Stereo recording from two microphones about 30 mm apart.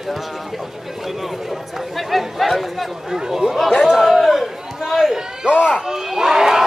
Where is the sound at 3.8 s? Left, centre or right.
Centre.